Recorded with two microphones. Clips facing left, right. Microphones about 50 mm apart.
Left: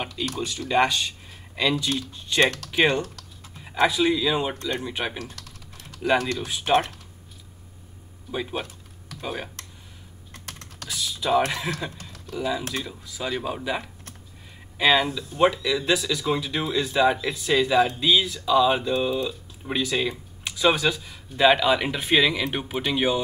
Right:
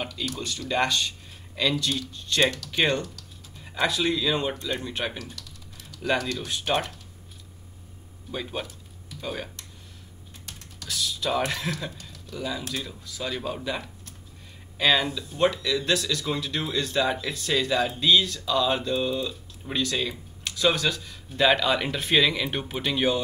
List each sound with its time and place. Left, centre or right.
0.4 s speech: centre
2.4 s speech: left
2.7 s speech: centre
5.2 s typing: left
6.0 s speech: centre
8.3 s speech: centre
10.3 s computer keyboard: left
10.9 s speech: centre